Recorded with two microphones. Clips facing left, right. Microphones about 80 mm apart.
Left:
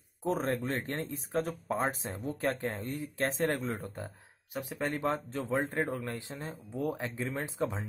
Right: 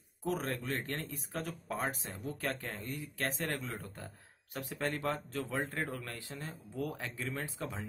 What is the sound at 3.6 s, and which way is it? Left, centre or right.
Speech, left.